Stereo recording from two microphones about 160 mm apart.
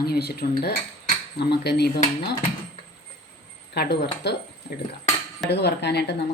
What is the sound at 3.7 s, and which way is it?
Speech, 90° left.